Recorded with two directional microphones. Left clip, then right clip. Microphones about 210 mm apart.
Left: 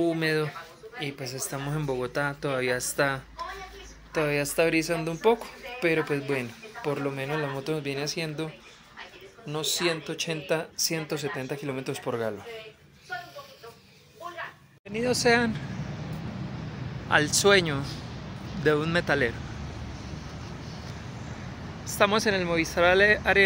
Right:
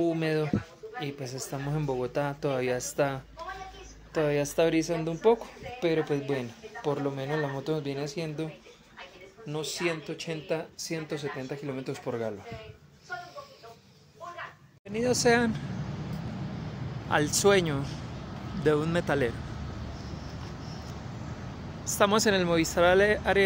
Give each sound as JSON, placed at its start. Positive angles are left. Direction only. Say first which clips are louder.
{"t": 0.0, "sound": "a woman's voice", "louder": "left 2 dB", "side_deg": -5}
{"t": 9.5, "sound": "speech", "louder": "left 4 dB", "side_deg": 0}
{"t": 14.9, "sound": "speech", "louder": "left 1 dB", "side_deg": -5}
{"t": 17.1, "sound": "speech", "louder": "left 3 dB", "side_deg": -5}
{"t": 21.8, "sound": "a woman's voice", "louder": "left 1 dB", "side_deg": -10}
{"t": 22.8, "sound": "a woman's voice", "louder": "left 3 dB", "side_deg": -10}